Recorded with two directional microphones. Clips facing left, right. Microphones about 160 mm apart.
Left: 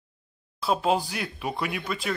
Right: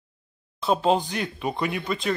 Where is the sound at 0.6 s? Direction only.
5° left (ahead or behind).